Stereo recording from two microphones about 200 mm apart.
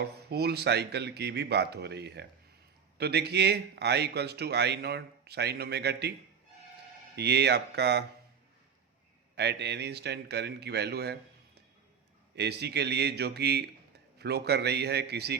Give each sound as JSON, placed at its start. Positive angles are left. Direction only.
{"t": 0.0, "sound": "speech", "side_deg": -55}
{"t": 7.2, "sound": "speech", "side_deg": -55}
{"t": 9.3, "sound": "speech", "side_deg": -55}